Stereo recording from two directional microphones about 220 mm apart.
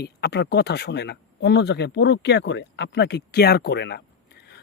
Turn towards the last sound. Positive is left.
turn(degrees=50)  # may be behind; listen again after turning